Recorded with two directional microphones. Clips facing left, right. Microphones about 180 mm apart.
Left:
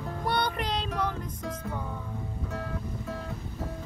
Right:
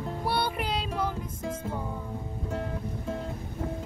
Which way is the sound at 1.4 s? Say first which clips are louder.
Right 3 dB; 25° right (ahead or behind).